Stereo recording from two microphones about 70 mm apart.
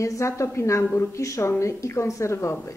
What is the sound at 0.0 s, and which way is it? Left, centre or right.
A woman's voice, left.